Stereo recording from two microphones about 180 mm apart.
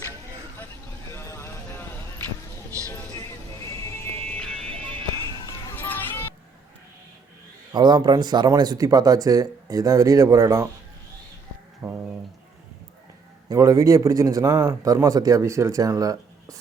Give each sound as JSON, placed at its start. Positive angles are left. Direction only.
{"t": 1.1, "sound": "a sound", "side_deg": 15}
{"t": 2.6, "sound": "music", "side_deg": -20}
{"t": 4.3, "sound": "music", "side_deg": 5}
{"t": 4.6, "sound": "music", "side_deg": -30}
{"t": 5.5, "sound": "a sound", "side_deg": 15}
{"t": 7.7, "sound": "speech", "side_deg": -25}
{"t": 11.8, "sound": "speech", "side_deg": -10}
{"t": 13.5, "sound": "speech", "side_deg": -20}